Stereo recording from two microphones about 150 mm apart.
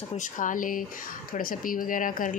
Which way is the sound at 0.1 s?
60° left (ahead or behind).